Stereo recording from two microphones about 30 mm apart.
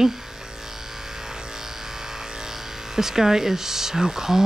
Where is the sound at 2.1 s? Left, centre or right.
Centre.